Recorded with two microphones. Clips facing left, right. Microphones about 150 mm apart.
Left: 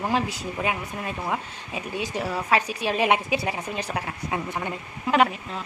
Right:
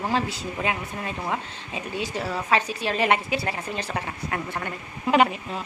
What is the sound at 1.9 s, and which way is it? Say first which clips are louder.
A woman's voice: left 1 dB; 15° left (ahead or behind).